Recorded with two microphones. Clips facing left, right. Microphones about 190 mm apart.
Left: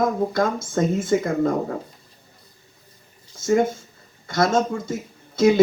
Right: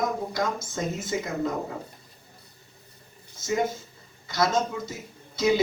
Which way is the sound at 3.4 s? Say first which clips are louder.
Left 7 dB; 50° left (ahead or behind).